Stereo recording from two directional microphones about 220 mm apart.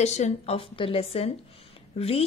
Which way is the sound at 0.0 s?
30° left (ahead or behind).